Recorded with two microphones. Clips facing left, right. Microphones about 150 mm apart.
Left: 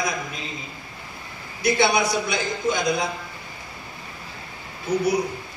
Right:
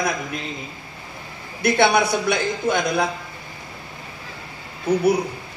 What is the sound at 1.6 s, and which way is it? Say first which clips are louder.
Speech: right 3 dB; 60° right (ahead or behind).